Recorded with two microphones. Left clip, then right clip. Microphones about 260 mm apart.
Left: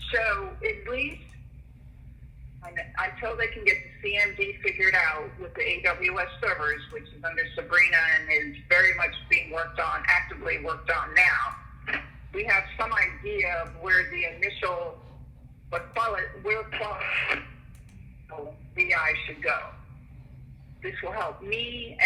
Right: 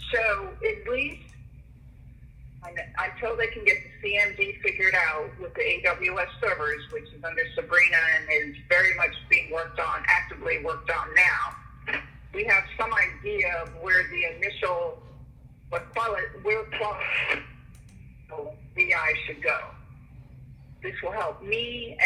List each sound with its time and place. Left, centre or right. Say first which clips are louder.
0.0 s speech: right 1 dB; centre
2.6 s a man's voice: even; centre
20.8 s a man's voice: right 2 dB; centre